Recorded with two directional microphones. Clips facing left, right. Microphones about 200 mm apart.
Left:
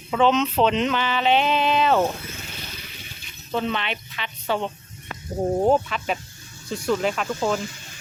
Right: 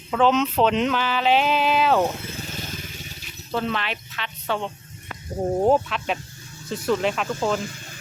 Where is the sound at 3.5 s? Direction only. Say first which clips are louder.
Even; centre (ahead or behind).